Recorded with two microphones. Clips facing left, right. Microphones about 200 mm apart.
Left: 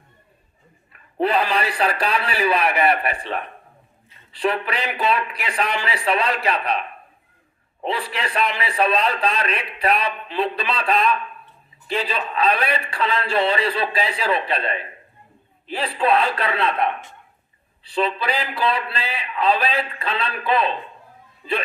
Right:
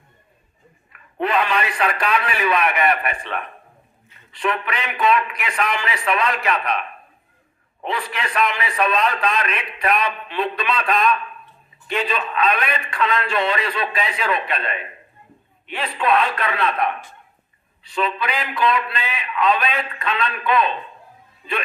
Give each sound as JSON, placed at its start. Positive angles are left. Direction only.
{"t": 0.9, "sound": "a man's voice", "side_deg": 35}